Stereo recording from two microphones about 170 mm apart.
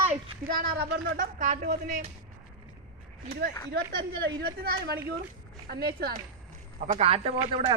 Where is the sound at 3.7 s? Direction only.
80° right.